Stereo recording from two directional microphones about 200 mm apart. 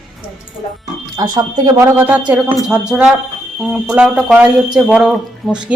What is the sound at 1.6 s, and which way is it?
A man's voice, 15° right (ahead or behind).